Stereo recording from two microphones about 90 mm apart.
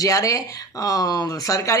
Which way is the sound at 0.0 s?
40° left (ahead or behind).